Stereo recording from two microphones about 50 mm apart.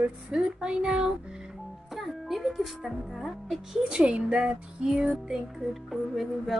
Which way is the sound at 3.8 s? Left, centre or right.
Centre.